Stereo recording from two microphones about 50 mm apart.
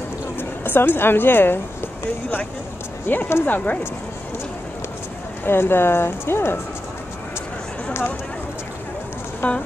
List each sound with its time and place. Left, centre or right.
0.4 s speech: left
3.1 s speech: left
3.4 s speech: left
5.4 s speech: left
9.4 s speech: left